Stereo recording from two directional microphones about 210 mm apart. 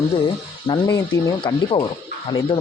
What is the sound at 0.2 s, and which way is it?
A man's voice, 20° left (ahead or behind).